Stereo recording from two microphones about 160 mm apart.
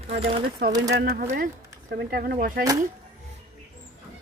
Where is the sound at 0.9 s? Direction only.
75° right (ahead or behind); by 1.5 s 60° right (ahead or behind).